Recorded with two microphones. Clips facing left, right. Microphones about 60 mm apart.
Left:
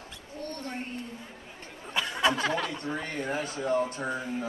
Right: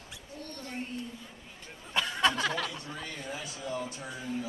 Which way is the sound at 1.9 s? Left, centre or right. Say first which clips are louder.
Left 1 dB; centre.